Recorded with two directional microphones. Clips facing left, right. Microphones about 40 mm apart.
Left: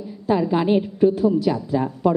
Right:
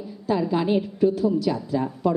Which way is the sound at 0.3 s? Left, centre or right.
Left.